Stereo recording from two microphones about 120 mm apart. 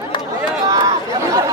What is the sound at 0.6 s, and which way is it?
Chatter, 30° right (ahead or behind).